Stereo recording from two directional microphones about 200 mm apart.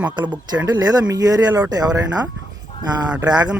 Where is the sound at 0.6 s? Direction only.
20° right (ahead or behind).